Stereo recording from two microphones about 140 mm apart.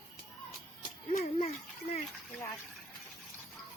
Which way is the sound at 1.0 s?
60° left (ahead or behind).